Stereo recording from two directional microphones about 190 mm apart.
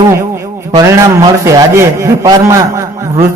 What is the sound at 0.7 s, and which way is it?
A man's voice, 20° right (ahead or behind).